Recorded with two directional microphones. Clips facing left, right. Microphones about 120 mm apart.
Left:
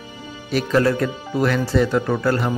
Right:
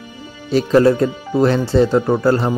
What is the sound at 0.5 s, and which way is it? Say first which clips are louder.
Speech: right 6 dB; 25° right (ahead or behind).